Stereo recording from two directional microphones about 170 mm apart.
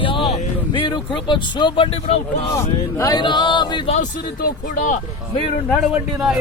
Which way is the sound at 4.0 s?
50° left (ahead or behind).